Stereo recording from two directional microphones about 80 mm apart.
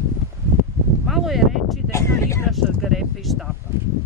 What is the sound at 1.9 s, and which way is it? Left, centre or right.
Speech, left.